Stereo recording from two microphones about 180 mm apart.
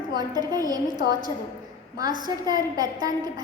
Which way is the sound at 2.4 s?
20° right (ahead or behind).